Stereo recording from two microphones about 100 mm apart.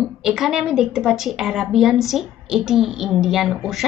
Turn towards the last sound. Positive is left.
turn(degrees=0)  # may be behind; listen again after turning